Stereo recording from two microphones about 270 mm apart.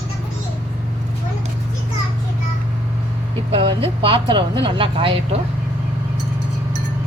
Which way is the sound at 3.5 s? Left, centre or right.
Centre.